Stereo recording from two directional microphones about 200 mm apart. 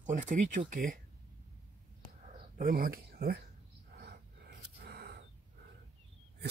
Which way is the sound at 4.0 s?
50° right (ahead or behind).